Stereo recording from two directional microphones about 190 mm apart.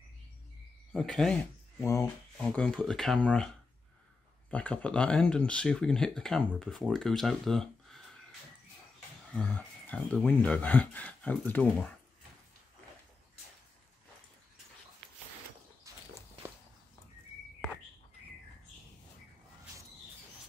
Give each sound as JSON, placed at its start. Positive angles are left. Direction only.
{"t": 0.9, "sound": "speech", "side_deg": 0}
{"t": 1.8, "sound": "speech", "side_deg": 15}
{"t": 2.3, "sound": "speech", "side_deg": 5}
{"t": 4.5, "sound": "speech", "side_deg": 5}
{"t": 9.3, "sound": "speech", "side_deg": 10}